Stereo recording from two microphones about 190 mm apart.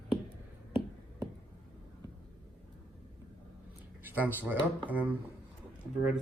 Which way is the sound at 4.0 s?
10° right (ahead or behind).